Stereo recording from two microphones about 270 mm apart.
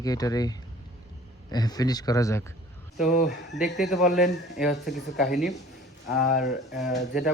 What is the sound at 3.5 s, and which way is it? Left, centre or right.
Speech, centre.